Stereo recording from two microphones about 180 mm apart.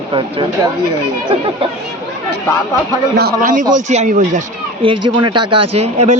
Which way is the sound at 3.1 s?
55° right (ahead or behind).